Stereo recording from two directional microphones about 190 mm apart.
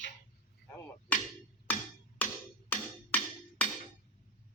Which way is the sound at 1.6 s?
10° left (ahead or behind).